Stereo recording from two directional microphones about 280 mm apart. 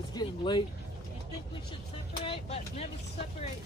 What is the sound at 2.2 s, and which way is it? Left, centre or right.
Vehicle, left.